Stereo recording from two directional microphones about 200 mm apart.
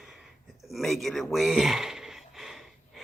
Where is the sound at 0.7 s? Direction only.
Centre (ahead or behind).